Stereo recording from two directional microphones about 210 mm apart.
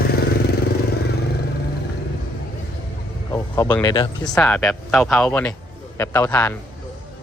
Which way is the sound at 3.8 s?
20° left (ahead or behind).